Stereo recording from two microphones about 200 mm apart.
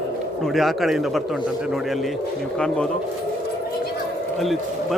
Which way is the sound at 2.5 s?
5° left (ahead or behind).